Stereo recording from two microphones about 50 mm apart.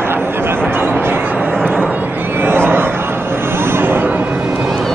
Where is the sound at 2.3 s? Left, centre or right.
Right.